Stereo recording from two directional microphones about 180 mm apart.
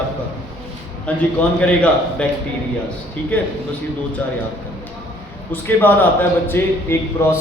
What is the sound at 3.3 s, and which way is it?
Speech, 10° left (ahead or behind).